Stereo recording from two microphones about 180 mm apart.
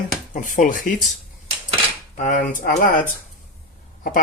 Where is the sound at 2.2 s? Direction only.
45° left (ahead or behind).